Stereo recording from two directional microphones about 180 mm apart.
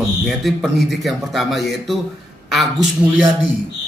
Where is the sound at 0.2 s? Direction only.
Centre (ahead or behind).